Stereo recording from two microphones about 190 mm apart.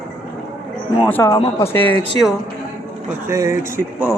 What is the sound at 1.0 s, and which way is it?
Speech, 15° left (ahead or behind).